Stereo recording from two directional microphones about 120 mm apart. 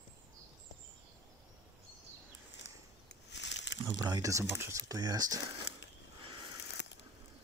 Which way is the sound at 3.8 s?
30° right (ahead or behind).